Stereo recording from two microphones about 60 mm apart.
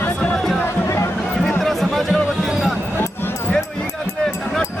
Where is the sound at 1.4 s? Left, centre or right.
Centre.